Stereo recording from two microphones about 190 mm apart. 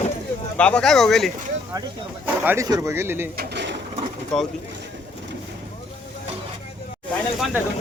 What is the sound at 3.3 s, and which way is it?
Bird, 60° right (ahead or behind).